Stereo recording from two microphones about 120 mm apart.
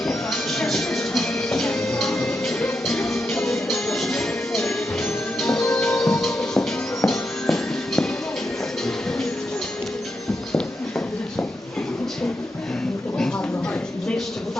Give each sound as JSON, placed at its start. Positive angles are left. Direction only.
{"t": 0.0, "sound": "music", "side_deg": 5}